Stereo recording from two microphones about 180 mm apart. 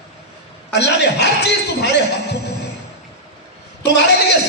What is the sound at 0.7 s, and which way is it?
A man's voice, 70° left (ahead or behind).